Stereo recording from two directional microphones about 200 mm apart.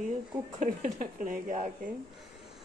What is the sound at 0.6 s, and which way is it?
Speech, 45° right (ahead or behind).